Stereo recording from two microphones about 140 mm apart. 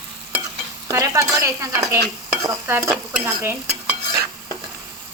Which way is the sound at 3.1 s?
10° right (ahead or behind).